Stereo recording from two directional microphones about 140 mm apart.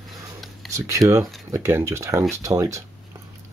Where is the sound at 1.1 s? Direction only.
20° right (ahead or behind).